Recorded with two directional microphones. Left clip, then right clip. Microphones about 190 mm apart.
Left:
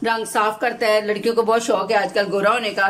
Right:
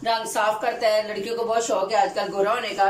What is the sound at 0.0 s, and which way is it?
Speech, 65° left (ahead or behind).